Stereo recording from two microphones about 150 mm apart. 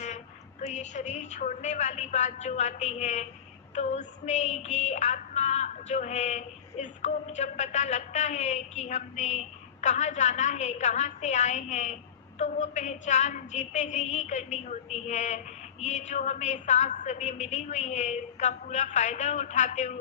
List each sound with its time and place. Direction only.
0.6 s female singing: 50° left (ahead or behind)